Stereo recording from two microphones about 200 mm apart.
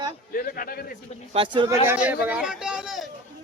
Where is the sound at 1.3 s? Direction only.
25° right (ahead or behind).